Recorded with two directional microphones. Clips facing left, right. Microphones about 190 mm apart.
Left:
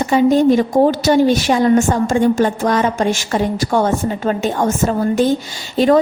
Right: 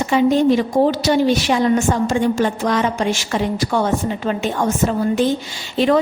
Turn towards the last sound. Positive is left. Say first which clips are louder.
# left 3 dB
turn(degrees=40)  # may be behind; listen again after turning